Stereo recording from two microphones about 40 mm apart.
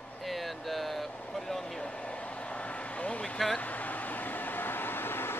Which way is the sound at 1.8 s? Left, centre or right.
Left.